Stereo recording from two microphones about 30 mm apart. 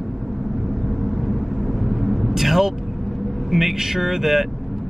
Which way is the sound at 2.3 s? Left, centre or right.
Centre.